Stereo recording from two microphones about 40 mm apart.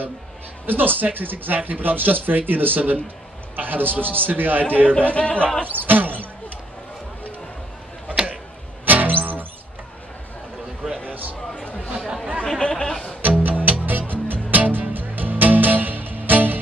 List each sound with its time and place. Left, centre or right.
0.7 s a man's voice: right
4.8 s speech: left
5.7 s basketball bounce: right
8.8 s music: right
11.6 s a sound: left
12.5 s a sound: left
13.2 s music: right